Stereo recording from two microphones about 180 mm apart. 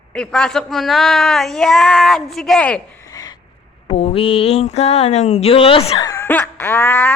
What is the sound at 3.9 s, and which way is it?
Speech, 35° left (ahead or behind).